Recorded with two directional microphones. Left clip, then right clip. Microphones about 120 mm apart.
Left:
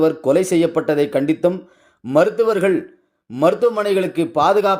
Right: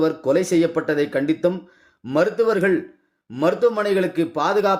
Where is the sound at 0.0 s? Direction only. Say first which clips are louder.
Left 4 dB; 25° left (ahead or behind).